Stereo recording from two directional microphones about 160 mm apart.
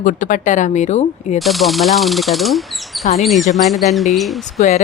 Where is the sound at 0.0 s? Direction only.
55° left (ahead or behind).